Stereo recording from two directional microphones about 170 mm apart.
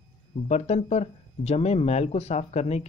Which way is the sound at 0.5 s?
40° left (ahead or behind).